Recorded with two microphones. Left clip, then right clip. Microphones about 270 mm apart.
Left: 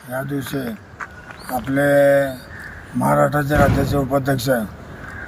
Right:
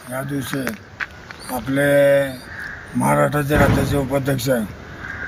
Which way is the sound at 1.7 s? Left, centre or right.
Right.